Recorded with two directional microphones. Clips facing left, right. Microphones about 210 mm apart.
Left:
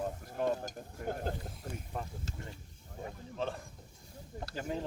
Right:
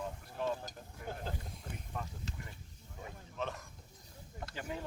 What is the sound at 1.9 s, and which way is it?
Speech, 35° left (ahead or behind).